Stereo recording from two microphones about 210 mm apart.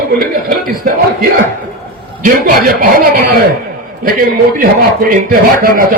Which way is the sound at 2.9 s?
40° right (ahead or behind).